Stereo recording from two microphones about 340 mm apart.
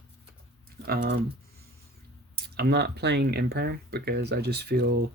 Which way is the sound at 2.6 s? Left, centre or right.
Right.